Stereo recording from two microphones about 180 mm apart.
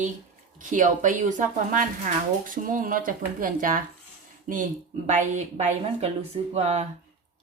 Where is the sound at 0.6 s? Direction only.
45° right (ahead or behind).